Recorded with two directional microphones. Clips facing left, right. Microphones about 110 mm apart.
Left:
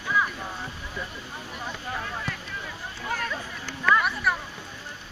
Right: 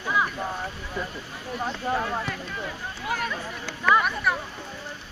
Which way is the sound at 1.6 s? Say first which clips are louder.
Right 8 dB; 40° right (ahead or behind).